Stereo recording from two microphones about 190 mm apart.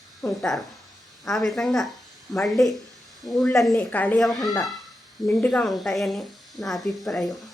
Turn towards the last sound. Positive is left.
turn(degrees=0)  # may be behind; listen again after turning